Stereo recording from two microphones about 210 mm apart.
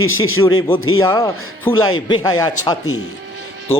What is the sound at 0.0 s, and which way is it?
A man's voice, 75° left (ahead or behind).